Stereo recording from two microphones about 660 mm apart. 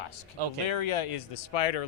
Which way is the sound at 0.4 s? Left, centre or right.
Right.